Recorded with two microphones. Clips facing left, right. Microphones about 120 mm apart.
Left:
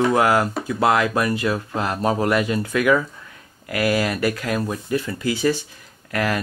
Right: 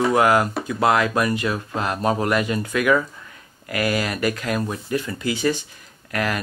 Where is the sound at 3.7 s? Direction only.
10° left (ahead or behind).